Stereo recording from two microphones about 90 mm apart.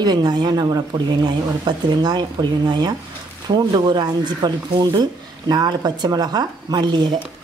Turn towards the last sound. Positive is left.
turn(degrees=-55)  # may be behind; listen again after turning